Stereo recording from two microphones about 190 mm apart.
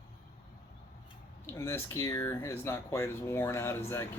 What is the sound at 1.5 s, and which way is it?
Speech, 15° left (ahead or behind).